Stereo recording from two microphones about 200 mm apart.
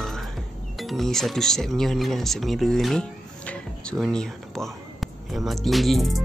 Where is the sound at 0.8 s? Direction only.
Centre (ahead or behind).